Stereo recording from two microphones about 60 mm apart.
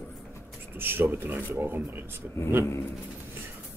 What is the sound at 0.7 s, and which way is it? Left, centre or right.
Speech, right.